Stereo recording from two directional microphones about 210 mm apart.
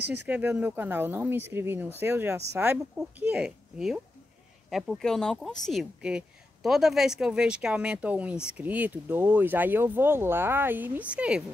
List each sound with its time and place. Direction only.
0.0 s speech: 50° right (ahead or behind)
0.3 s speech: 10° right (ahead or behind)